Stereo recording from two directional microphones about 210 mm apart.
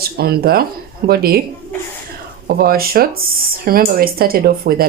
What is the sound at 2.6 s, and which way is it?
Speech, 45° right (ahead or behind).